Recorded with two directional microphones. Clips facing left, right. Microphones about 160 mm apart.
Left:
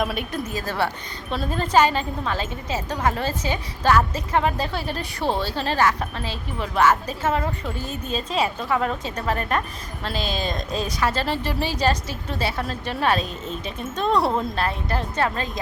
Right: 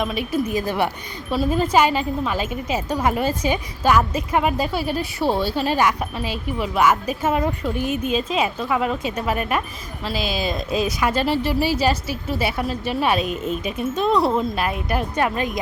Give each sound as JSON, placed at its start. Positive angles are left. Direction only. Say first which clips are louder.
{"t": 0.0, "sound": "a woman's voice", "louder": "right 1 dB", "side_deg": 0}
{"t": 0.4, "sound": "speech", "louder": "right 4 dB", "side_deg": -15}
{"t": 14.5, "sound": "speech", "louder": "right 2 dB", "side_deg": -15}